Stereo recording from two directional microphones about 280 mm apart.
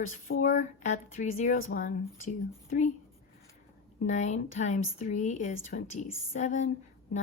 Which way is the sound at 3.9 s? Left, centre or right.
Left.